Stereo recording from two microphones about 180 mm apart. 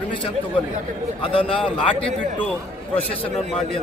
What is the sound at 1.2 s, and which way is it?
Speech, 30° left (ahead or behind).